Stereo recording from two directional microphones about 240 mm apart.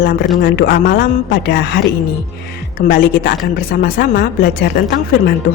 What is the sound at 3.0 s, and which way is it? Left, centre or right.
Speech, left.